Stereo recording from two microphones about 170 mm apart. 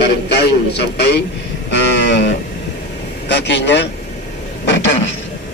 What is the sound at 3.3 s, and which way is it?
A man's voice, 90° left.